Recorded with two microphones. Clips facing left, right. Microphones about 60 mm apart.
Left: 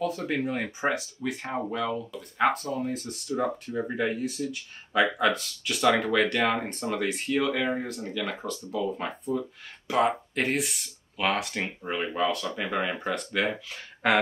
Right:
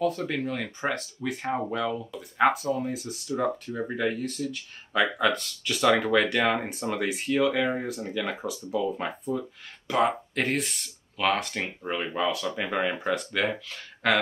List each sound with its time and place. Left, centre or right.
0.3 s speech: centre
1.2 s speech: centre